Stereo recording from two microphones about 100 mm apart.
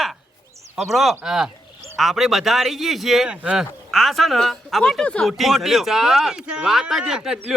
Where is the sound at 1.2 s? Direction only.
5° right (ahead or behind).